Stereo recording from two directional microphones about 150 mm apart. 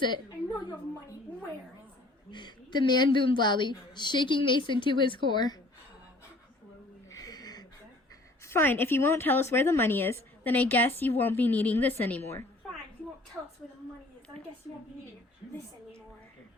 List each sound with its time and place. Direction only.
2.3 s a woman's voice: 30° left (ahead or behind)
7.1 s a sound: 25° left (ahead or behind)
8.4 s speech: 15° left (ahead or behind)
13.4 s a woman's voice: 5° right (ahead or behind)